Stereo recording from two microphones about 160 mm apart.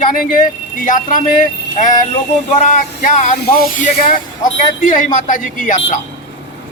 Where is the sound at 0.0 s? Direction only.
60° left (ahead or behind).